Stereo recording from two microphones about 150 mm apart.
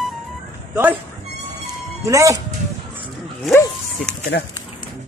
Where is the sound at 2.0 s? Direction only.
20° right (ahead or behind).